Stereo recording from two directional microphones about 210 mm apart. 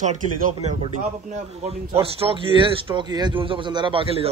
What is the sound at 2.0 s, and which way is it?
A man's voice, 25° right (ahead or behind).